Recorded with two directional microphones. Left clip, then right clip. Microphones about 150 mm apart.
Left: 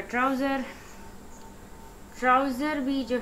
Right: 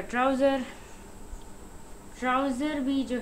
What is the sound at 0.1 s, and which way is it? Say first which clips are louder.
Speech: right 2 dB; 30° right (ahead or behind).